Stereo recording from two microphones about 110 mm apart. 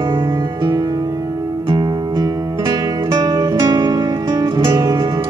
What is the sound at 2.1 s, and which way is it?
Music, 35° right (ahead or behind).